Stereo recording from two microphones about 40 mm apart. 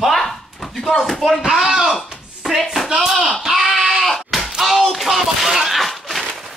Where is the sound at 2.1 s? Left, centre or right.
Centre.